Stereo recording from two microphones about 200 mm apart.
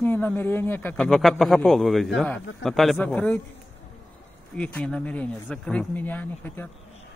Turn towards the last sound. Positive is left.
turn(degrees=10)  # may be behind; listen again after turning